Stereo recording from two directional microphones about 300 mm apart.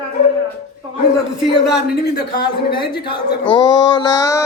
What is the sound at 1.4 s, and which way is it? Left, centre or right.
Speech, centre.